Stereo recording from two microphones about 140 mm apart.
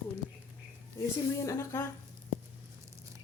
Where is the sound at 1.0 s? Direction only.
20° left (ahead or behind).